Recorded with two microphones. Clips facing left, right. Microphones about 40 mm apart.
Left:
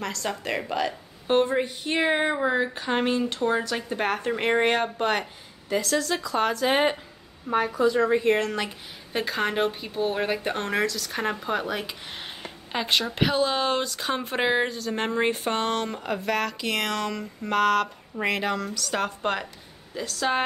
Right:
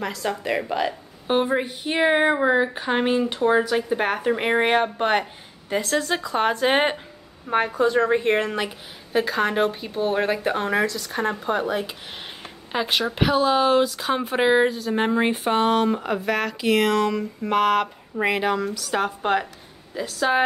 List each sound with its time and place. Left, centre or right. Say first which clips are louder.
0.0 s a woman's voice: right 3 dB; centre; by 8.4 s right
8.4 s a woman's voice: right 3 dB; centre
8.6 s speech: right 3 dB; centre